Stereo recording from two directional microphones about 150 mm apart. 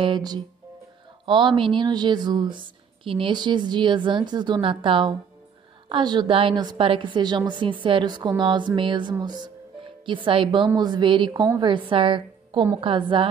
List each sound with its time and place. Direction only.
0.0 s speech: 30° right (ahead or behind)